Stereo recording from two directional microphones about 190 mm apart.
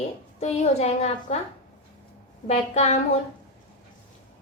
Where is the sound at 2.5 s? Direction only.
35° left (ahead or behind).